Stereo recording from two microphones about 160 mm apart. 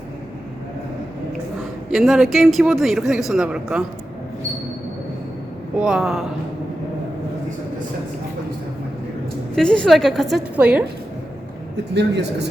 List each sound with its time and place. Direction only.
1.9 s a man's voice: centre (ahead or behind)
5.8 s a man's voice: centre (ahead or behind)
9.6 s a man's voice: 5° left (ahead or behind)
11.9 s speech: 90° right